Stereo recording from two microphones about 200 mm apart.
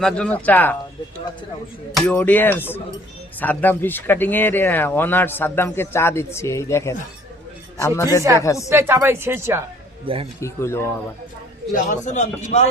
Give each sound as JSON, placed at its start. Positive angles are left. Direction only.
{"t": 0.0, "sound": "speech", "side_deg": 5}
{"t": 1.9, "sound": "speech", "side_deg": 5}
{"t": 8.7, "sound": "a woman's voice", "side_deg": -10}
{"t": 10.1, "sound": "speech", "side_deg": -25}
{"t": 10.4, "sound": "speech", "side_deg": 15}
{"t": 11.7, "sound": "a man's voice", "side_deg": 40}